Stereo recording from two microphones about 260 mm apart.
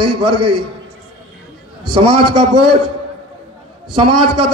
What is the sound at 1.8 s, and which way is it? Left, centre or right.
Speech, right.